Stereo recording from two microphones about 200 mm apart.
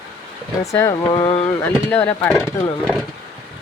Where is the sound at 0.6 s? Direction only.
15° left (ahead or behind).